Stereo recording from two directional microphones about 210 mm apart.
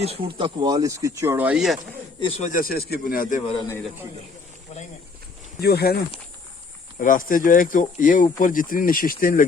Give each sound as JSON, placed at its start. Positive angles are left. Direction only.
{"t": 0.0, "sound": "speech", "side_deg": -25}
{"t": 2.2, "sound": "speech", "side_deg": 35}
{"t": 5.5, "sound": "speech", "side_deg": 50}
{"t": 7.0, "sound": "speech", "side_deg": 40}